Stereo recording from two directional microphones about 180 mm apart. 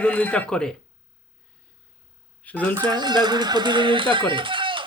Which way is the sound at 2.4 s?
10° left (ahead or behind).